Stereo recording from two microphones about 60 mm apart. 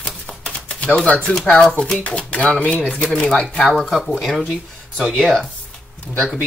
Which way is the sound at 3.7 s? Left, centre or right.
Centre.